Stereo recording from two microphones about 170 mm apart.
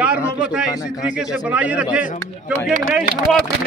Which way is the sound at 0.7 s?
20° left (ahead or behind).